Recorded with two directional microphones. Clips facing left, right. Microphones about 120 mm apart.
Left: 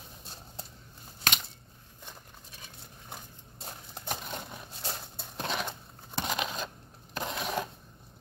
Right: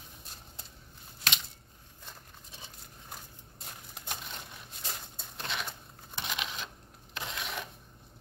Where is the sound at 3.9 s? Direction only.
40° left (ahead or behind).